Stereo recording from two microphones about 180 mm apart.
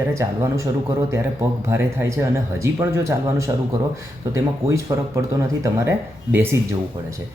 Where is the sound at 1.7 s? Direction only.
15° right (ahead or behind).